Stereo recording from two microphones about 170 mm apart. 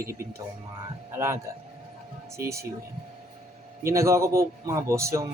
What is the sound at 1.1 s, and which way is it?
Speech, 15° right (ahead or behind).